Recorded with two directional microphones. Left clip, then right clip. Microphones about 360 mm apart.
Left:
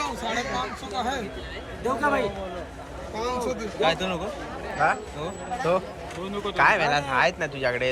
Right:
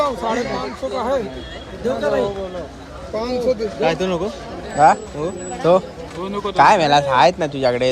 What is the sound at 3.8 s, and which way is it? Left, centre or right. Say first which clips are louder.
Speech: right 5 dB; right.